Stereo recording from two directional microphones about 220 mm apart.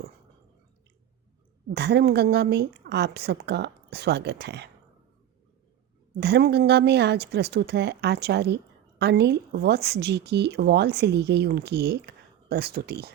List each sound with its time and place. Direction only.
1.7 s speech: 50° right (ahead or behind)
6.1 s speech: 50° right (ahead or behind)